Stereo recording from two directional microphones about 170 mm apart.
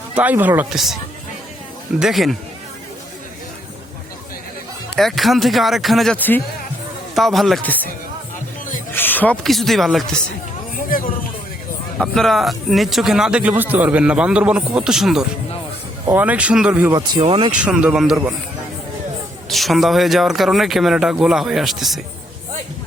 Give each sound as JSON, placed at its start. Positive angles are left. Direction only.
{"t": 0.2, "sound": "speech", "side_deg": -10}
{"t": 2.0, "sound": "speech", "side_deg": 0}
{"t": 4.9, "sound": "speech", "side_deg": 0}
{"t": 8.9, "sound": "speech", "side_deg": 10}
{"t": 11.9, "sound": "speech", "side_deg": 0}
{"t": 16.9, "sound": "speech", "side_deg": -30}
{"t": 17.6, "sound": "speech", "side_deg": -5}
{"t": 19.5, "sound": "speech", "side_deg": 0}